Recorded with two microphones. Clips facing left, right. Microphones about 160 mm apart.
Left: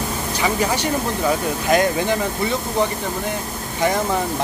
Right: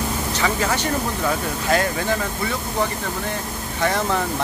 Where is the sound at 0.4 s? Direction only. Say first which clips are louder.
Left 2 dB; 15° left (ahead or behind).